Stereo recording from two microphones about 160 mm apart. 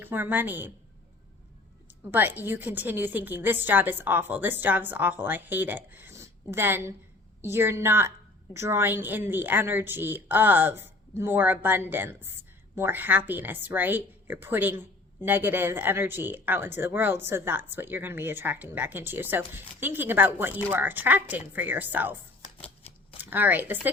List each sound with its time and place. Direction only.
0.0 s a woman's voice: 10° right (ahead or behind)
2.0 s a woman's voice: 10° right (ahead or behind)